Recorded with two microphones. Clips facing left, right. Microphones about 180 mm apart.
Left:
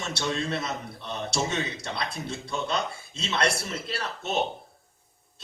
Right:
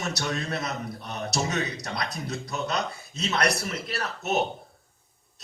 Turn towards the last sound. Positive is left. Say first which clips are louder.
# right 2 dB
turn(degrees=25)  # may be behind; listen again after turning